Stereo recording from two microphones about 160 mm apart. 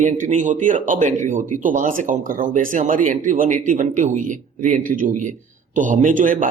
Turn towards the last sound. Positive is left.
turn(degrees=-55)  # may be behind; listen again after turning